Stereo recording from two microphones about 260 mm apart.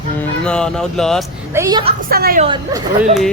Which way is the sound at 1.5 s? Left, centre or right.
Centre.